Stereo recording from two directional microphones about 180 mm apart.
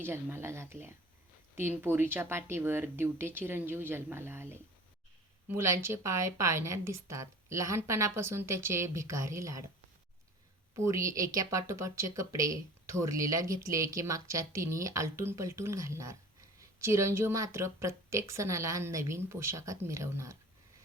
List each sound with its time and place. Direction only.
0.0 s speech: 10° right (ahead or behind)
10.8 s speech: 15° right (ahead or behind)